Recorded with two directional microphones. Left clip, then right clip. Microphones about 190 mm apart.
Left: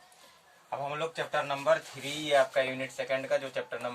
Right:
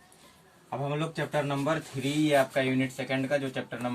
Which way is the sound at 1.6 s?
15° left (ahead or behind).